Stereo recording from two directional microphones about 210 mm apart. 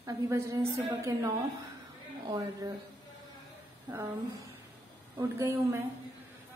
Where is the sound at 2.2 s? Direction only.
15° right (ahead or behind).